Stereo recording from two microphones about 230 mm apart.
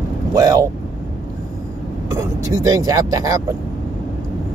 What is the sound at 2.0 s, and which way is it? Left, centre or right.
Speech, centre.